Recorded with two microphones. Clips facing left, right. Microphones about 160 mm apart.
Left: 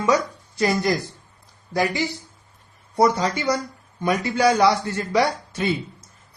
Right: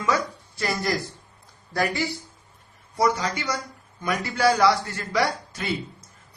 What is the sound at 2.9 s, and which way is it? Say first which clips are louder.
Speech: left 4 dB; 35° left (ahead or behind).